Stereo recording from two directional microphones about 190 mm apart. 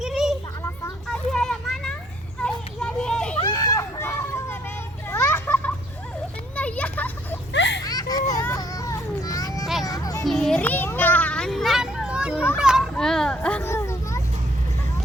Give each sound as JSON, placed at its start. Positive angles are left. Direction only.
{"t": 0.0, "sound": "a sound", "side_deg": 0}
{"t": 1.0, "sound": "children playing", "side_deg": 5}
{"t": 3.4, "sound": "a sound", "side_deg": 20}
{"t": 5.1, "sound": "children playing", "side_deg": 10}
{"t": 7.5, "sound": "children playing", "side_deg": 70}
{"t": 7.9, "sound": "children playing", "side_deg": 20}
{"t": 10.2, "sound": "children playing", "side_deg": 5}